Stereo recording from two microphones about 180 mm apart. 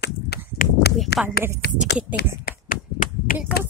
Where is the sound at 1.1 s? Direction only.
65° left (ahead or behind).